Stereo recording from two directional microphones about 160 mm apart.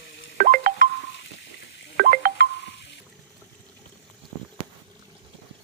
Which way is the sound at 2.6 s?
90° left.